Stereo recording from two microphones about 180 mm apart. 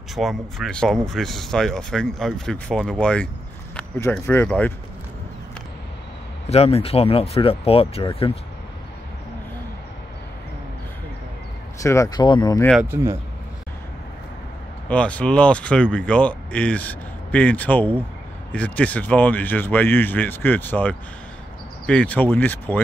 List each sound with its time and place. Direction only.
0.1 s speech: centre (ahead or behind)
6.5 s speech: 35° left (ahead or behind)
11.8 s speech: 15° left (ahead or behind)
12.8 s speech: 15° right (ahead or behind)
14.9 s speech: 5° left (ahead or behind)